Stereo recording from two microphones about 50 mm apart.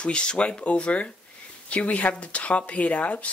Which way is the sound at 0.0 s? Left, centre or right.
Left.